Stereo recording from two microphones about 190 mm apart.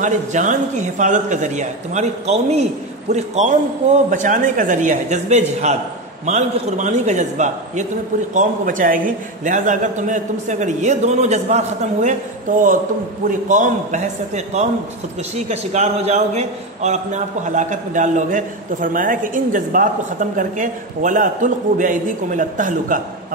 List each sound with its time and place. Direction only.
0.0 s a man's voice: 40° right (ahead or behind)